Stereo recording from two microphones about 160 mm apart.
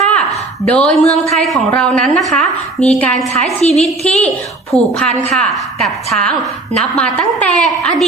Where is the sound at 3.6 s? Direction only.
40° left (ahead or behind).